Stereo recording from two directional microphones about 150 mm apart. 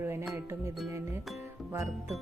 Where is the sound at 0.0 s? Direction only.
15° right (ahead or behind).